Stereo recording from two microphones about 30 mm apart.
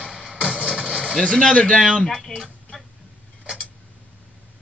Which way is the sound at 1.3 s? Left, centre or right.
Left.